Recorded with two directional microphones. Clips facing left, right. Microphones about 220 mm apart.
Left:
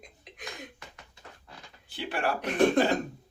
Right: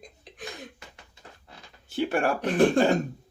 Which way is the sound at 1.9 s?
45° right (ahead or behind).